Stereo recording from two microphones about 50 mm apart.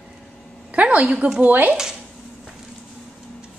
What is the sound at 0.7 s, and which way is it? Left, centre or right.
A child's voice, right.